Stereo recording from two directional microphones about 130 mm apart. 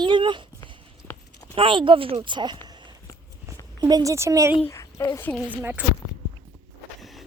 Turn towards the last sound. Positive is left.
turn(degrees=-15)  # may be behind; listen again after turning